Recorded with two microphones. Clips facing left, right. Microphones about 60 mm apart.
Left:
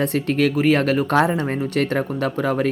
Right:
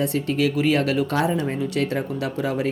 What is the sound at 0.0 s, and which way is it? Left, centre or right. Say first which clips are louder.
Speech: left 3 dB; left.